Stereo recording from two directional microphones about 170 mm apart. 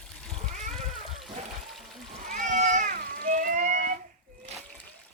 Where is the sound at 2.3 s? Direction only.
45° right (ahead or behind).